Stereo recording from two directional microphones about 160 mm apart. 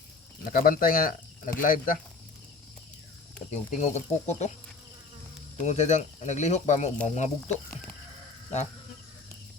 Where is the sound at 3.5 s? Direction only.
50° left (ahead or behind).